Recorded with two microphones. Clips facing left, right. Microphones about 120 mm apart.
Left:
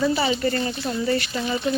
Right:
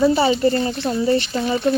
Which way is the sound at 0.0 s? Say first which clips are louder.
Right 6 dB; 30° right (ahead or behind).